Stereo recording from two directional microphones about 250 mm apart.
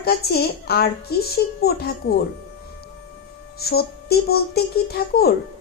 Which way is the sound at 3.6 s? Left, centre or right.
Left.